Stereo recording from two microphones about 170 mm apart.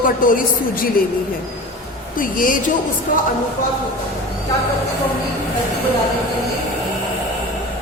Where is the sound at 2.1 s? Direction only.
55° left (ahead or behind).